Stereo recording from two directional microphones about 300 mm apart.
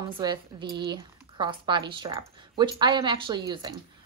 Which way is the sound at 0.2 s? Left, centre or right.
Centre.